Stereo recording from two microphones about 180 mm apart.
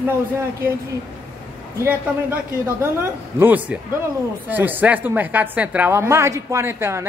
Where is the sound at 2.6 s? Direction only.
15° right (ahead or behind).